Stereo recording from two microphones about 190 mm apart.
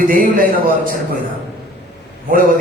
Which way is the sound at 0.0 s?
45° right (ahead or behind).